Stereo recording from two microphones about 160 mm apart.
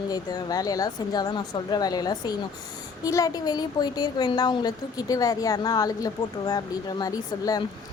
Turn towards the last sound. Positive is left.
turn(degrees=20)  # may be behind; listen again after turning